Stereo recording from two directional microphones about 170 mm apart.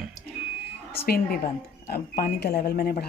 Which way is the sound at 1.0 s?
65° left (ahead or behind).